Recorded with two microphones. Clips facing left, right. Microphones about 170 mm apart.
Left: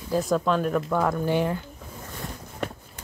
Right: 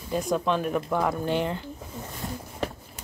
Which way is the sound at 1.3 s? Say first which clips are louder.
Left 2 dB; 10° left (ahead or behind).